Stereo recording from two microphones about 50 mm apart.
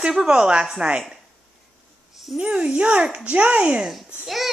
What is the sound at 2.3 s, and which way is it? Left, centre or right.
A child's voice, right.